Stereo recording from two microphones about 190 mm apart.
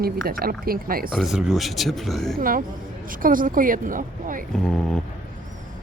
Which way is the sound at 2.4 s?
45° right (ahead or behind).